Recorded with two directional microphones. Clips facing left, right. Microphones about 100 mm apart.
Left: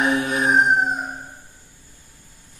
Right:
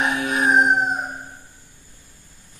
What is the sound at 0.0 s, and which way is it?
Howl, 30° left (ahead or behind).